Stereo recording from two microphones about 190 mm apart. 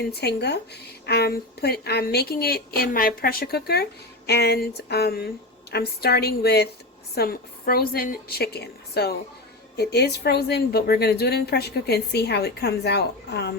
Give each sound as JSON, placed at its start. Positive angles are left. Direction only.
{"t": 0.1, "sound": "a woman's voice", "side_deg": 60}